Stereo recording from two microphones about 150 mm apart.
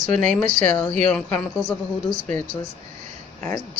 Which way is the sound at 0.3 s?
55° right (ahead or behind).